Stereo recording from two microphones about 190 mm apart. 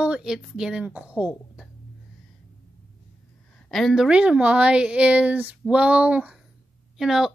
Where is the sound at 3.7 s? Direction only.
Centre (ahead or behind).